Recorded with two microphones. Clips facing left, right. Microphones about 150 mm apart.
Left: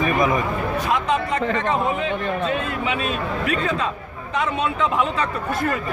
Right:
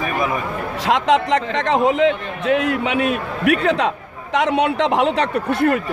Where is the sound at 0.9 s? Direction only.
90° right; by 5.8 s 70° right (ahead or behind).